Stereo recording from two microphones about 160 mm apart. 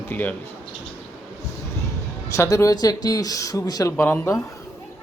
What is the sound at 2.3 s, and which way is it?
Speech, 20° left (ahead or behind).